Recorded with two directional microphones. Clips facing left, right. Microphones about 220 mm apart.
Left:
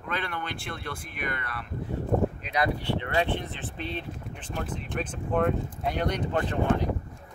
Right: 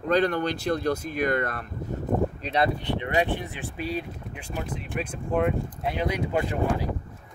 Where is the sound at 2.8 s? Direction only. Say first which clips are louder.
Right 2 dB; 15° right (ahead or behind).